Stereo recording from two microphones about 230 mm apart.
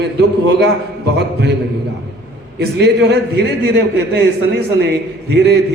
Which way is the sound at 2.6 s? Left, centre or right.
Right.